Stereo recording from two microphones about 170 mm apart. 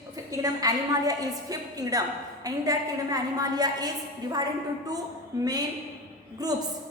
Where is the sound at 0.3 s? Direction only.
20° right (ahead or behind).